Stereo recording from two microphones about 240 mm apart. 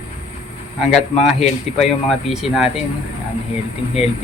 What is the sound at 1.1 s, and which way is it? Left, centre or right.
Speech, left.